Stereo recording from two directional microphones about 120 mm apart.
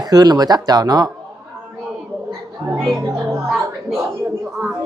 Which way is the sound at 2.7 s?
Centre (ahead or behind).